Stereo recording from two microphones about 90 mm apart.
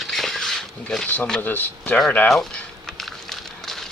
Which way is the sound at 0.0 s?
Centre (ahead or behind).